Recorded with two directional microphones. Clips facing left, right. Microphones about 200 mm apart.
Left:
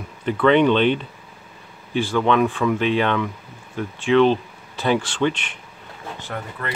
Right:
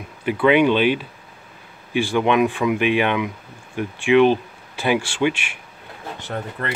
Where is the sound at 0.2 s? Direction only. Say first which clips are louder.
Even; 10° right (ahead or behind).